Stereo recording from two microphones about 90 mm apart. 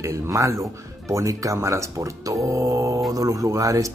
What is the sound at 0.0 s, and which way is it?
Speech, 35° right (ahead or behind).